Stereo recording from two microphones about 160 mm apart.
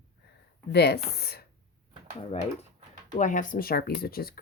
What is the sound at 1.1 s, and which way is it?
Speech, 80° left.